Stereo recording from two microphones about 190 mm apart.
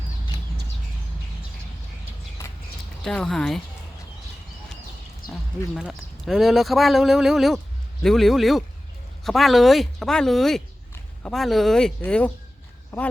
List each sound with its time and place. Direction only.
3.0 s speech: 5° left (ahead or behind)
5.2 s a sound: 50° left (ahead or behind)
5.7 s speech: centre (ahead or behind)